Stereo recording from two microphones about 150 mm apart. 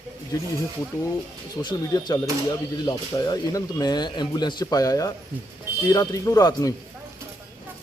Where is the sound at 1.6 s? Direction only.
30° left (ahead or behind).